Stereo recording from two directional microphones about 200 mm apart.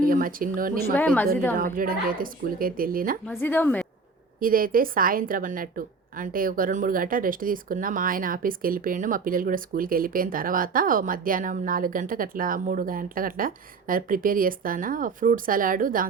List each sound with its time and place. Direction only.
0.0 s speech: 45° right (ahead or behind)
0.9 s a woman's voice: 10° left (ahead or behind)
1.5 s a woman's voice: 45° right (ahead or behind)
3.2 s a woman's voice: 10° left (ahead or behind)
4.4 s a woman's voice: 45° right (ahead or behind)